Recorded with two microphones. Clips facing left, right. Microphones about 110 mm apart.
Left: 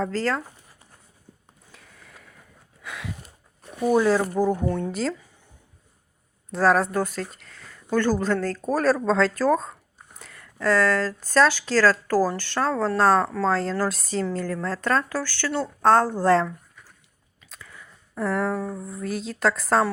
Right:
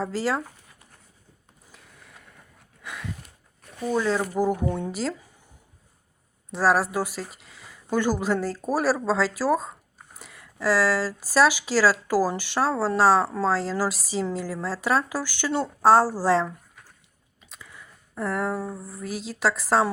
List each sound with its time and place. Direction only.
0.0 s speech: 10° right (ahead or behind)
1.7 s a sound: centre (ahead or behind)
3.6 s zipper: 20° left (ahead or behind)
4.4 s speech: 10° right (ahead or behind)
6.5 s speech: 5° right (ahead or behind)
17.5 s a sound: 5° right (ahead or behind)